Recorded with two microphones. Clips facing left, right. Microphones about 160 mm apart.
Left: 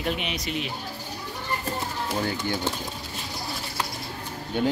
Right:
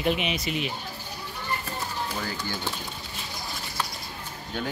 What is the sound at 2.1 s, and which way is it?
Speech, 20° left (ahead or behind).